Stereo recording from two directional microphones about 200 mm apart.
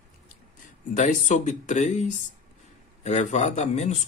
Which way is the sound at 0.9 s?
35° left (ahead or behind).